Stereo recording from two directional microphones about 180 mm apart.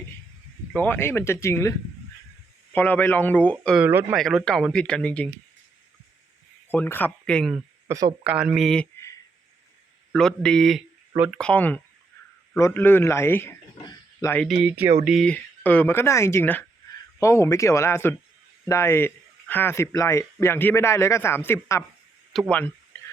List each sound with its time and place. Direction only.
0.7 s speech: 10° left (ahead or behind)
2.7 s speech: 10° left (ahead or behind)
3.8 s speech: 10° right (ahead or behind)
4.2 s speech: centre (ahead or behind)
6.7 s speech: 10° left (ahead or behind)
7.5 s speech: 15° right (ahead or behind)
8.2 s speech: 5° right (ahead or behind)
10.1 s speech: 5° left (ahead or behind)
13.8 s oink: 20° left (ahead or behind)
14.3 s speech: centre (ahead or behind)
22.3 s a sound: 5° left (ahead or behind)